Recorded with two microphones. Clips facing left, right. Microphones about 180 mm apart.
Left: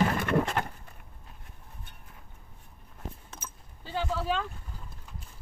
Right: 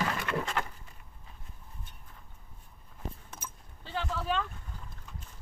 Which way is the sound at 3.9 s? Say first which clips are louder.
Left 3 dB; 5° left (ahead or behind).